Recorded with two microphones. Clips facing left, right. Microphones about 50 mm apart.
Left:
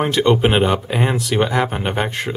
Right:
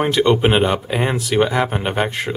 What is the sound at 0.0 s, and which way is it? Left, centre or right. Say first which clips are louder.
Speech: even; centre.